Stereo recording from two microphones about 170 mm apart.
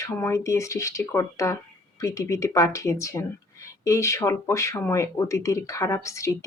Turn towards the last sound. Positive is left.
turn(degrees=15)  # may be behind; listen again after turning